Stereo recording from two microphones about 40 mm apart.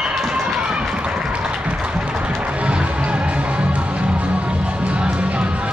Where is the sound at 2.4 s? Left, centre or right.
Right.